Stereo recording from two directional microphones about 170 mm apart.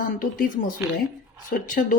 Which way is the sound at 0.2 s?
50° left (ahead or behind).